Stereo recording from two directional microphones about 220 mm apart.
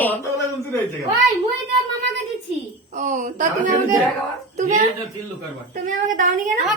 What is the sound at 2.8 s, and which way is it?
Speech, 35° right (ahead or behind).